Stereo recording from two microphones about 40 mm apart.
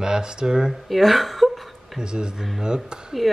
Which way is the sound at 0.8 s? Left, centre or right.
Centre.